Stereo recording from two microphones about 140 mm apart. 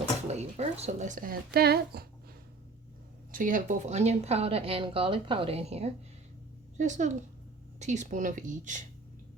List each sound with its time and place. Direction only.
0.3 s speech: 50° right (ahead or behind); by 2.0 s 90° right
3.3 s speech: 70° right (ahead or behind); by 5.9 s 50° right (ahead or behind)
6.7 s speech: 60° right (ahead or behind)